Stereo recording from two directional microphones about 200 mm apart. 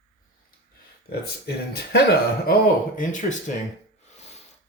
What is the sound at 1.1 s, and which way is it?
Speech, 55° left (ahead or behind).